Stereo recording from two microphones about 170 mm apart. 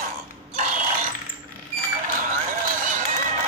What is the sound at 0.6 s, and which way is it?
Ratchet, 50° right (ahead or behind).